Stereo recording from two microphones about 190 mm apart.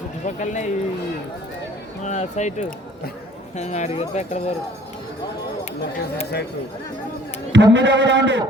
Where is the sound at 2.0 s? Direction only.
35° left (ahead or behind).